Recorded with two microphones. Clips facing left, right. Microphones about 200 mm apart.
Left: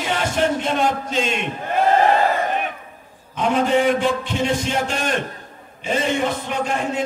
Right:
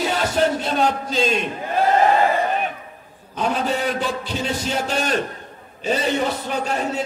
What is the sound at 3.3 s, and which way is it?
Music, 35° right (ahead or behind).